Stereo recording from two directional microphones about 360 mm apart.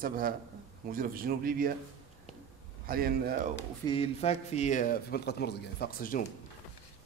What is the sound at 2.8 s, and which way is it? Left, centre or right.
Speech, right.